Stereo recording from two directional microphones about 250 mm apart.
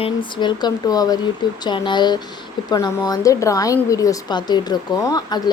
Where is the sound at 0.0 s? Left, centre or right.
Centre.